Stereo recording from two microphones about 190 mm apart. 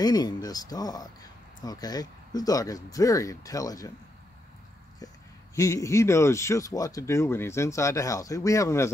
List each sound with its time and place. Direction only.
0.0 s speech: 20° left (ahead or behind)
5.6 s speech: 15° left (ahead or behind)